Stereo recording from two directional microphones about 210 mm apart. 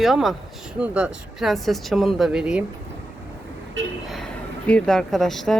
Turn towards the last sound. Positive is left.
turn(degrees=0)  # may be behind; listen again after turning